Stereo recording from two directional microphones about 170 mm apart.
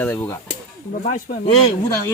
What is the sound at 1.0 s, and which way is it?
Speech, 50° left (ahead or behind).